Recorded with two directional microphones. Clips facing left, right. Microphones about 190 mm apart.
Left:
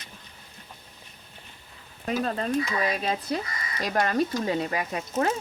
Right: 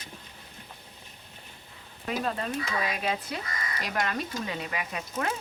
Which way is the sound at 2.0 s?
40° left (ahead or behind).